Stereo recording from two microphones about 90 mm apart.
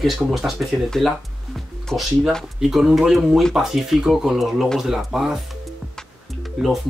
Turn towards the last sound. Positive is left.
turn(degrees=0)  # may be behind; listen again after turning